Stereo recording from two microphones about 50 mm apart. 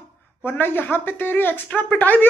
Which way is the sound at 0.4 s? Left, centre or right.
Left.